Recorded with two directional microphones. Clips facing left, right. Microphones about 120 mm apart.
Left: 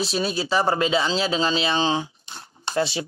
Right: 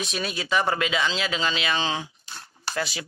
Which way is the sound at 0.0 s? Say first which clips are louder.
Left 6 dB; 30° left (ahead or behind).